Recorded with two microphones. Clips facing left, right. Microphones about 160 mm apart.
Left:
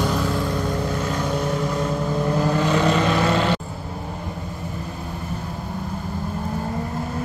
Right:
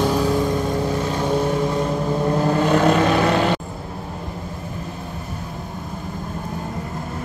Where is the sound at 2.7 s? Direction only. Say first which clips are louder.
Right 5 dB; 55° right (ahead or behind).